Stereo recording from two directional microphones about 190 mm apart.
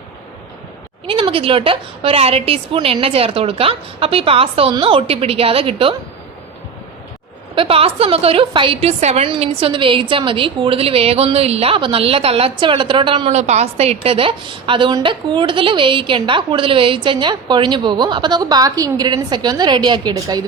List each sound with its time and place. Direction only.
1.0 s a woman's voice: 30° right (ahead or behind)
7.5 s a woman's voice: 30° right (ahead or behind)